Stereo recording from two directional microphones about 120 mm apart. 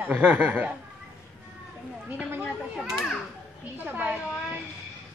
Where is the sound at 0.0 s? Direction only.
10° right (ahead or behind).